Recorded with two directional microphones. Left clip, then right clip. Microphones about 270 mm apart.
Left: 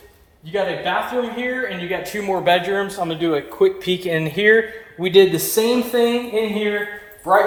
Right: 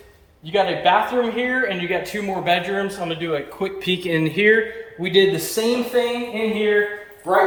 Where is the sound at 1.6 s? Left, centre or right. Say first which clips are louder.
Right 2 dB; centre.